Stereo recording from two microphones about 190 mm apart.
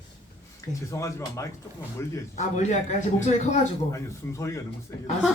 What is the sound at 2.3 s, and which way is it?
Speech, 40° left (ahead or behind).